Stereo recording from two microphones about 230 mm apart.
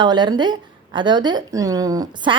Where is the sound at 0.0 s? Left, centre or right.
Centre.